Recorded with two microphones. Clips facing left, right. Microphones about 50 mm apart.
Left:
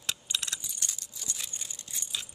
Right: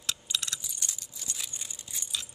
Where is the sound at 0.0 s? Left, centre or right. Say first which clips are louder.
Right 1 dB; centre.